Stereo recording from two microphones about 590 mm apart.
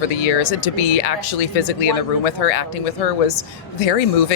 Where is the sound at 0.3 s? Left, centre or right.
Left.